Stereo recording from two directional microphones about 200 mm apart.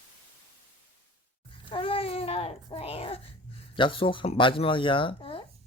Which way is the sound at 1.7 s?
25° left (ahead or behind).